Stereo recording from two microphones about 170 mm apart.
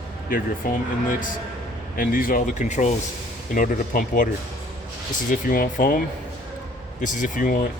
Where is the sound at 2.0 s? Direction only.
55° left (ahead or behind).